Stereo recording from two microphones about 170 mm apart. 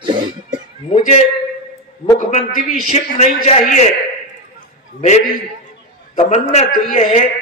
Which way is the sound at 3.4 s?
45° left (ahead or behind).